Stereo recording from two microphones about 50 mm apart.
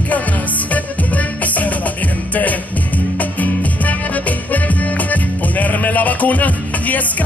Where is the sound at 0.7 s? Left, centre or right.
Left.